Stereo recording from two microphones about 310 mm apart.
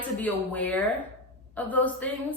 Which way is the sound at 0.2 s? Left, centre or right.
Centre.